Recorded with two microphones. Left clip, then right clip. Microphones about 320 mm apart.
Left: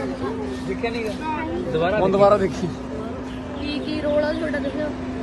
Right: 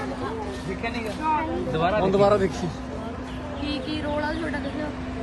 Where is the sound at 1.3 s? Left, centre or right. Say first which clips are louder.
Right 6 dB; right.